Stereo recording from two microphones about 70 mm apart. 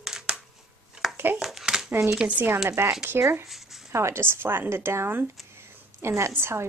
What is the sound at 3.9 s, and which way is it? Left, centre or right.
A woman's voice, right.